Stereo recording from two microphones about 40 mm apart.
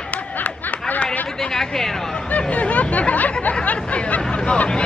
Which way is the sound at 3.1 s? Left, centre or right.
Left.